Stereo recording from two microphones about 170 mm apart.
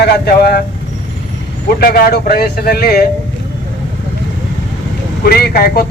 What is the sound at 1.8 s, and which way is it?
Speech, 60° left (ahead or behind).